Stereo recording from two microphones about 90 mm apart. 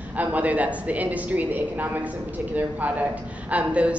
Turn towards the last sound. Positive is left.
turn(degrees=-15)  # may be behind; listen again after turning